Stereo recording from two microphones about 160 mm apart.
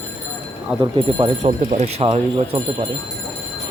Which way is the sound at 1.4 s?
45° right (ahead or behind).